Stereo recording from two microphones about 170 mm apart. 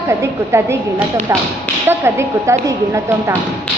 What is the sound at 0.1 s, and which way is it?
Speech, 15° right (ahead or behind).